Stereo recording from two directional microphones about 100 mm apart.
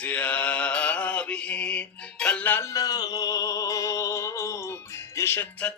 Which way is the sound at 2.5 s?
30° left (ahead or behind).